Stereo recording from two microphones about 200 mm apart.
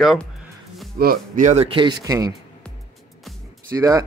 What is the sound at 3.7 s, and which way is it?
Speech, 15° right (ahead or behind).